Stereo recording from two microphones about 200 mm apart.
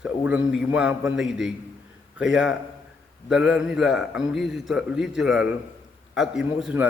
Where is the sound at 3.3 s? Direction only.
5° right (ahead or behind).